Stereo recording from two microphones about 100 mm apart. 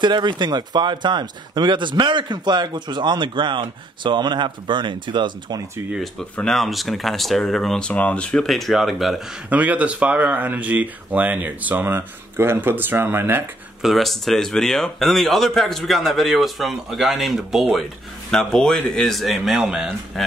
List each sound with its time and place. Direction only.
0.0 s speech: 50° right (ahead or behind)
6.3 s speech: 5° left (ahead or behind)
9.5 s speech: 15° right (ahead or behind)
13.8 s speech: centre (ahead or behind)